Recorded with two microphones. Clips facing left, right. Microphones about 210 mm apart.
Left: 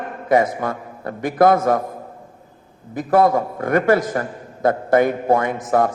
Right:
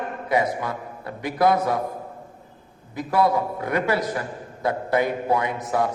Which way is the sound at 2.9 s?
50° left (ahead or behind).